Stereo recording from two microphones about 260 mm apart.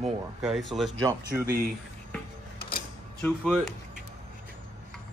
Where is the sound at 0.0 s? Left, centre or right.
Centre.